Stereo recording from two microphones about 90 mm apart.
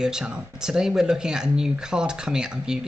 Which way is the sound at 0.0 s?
10° right (ahead or behind).